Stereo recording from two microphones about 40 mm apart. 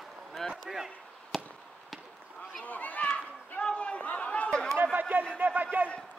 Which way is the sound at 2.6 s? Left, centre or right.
Left.